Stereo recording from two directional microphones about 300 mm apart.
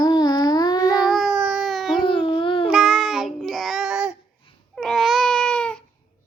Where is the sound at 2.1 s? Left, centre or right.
Centre.